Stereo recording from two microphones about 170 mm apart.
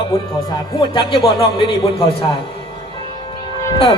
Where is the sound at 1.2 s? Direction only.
35° left (ahead or behind).